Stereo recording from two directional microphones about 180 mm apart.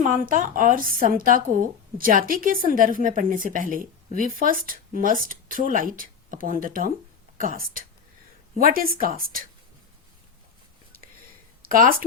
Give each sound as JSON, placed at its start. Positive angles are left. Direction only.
{"t": 0.0, "sound": "a woman's voice", "side_deg": -45}
{"t": 11.7, "sound": "a woman's voice", "side_deg": -50}